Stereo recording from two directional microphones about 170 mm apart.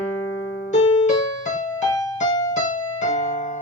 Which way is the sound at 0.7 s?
45° left (ahead or behind).